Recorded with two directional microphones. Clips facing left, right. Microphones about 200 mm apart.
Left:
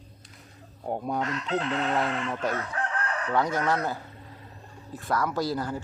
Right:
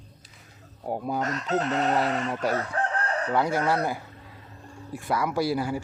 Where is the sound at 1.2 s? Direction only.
45° right (ahead or behind).